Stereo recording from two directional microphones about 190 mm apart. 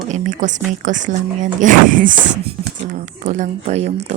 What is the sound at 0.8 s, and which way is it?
Music, 40° right (ahead or behind).